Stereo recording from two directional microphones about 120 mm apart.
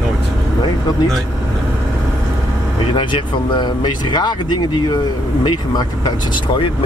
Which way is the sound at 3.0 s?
40° left (ahead or behind).